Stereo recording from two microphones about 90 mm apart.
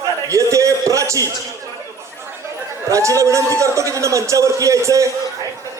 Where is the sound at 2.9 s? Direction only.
35° right (ahead or behind).